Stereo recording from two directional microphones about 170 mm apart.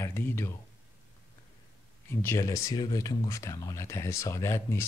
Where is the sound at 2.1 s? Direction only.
15° left (ahead or behind).